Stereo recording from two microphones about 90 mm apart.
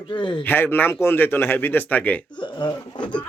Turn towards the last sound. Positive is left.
turn(degrees=60)  # may be behind; listen again after turning